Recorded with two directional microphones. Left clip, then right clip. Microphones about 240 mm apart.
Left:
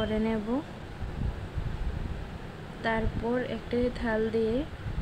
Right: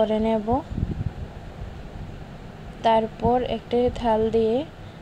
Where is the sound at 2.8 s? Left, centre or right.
Centre.